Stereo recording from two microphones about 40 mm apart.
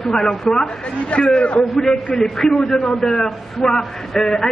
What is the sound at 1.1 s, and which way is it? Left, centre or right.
Speech, left.